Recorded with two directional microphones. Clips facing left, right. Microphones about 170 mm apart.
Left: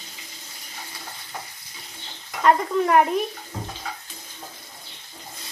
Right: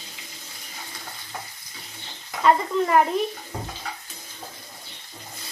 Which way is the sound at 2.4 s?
Centre (ahead or behind).